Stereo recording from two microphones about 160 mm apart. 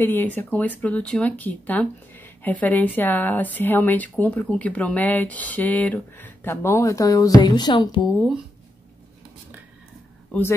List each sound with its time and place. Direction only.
0.0 s speech: 10° left (ahead or behind); by 8.1 s 30° left (ahead or behind)